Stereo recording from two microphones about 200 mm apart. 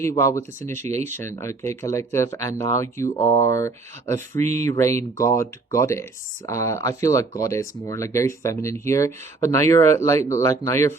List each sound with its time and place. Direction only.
0.0 s speech: 15° left (ahead or behind)
3.2 s speech: 30° left (ahead or behind)
3.4 s speech: 15° left (ahead or behind)